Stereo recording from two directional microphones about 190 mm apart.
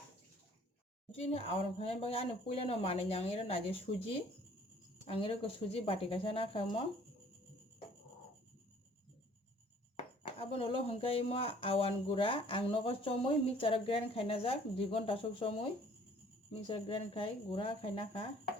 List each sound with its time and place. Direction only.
1.1 s speech: 30° left (ahead or behind)
10.2 s speech: 30° left (ahead or behind)